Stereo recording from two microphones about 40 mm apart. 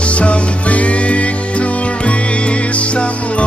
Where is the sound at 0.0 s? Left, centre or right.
Left.